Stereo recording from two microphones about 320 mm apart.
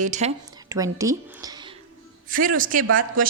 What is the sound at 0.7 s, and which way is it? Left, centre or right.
Speech, centre.